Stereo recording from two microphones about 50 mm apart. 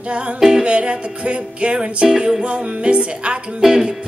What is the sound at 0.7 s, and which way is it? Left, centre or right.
Music, right.